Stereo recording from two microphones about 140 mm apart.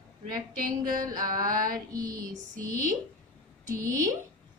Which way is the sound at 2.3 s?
65° right (ahead or behind).